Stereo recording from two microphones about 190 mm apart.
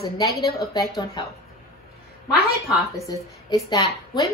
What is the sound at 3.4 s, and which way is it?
Speech, 20° left (ahead or behind).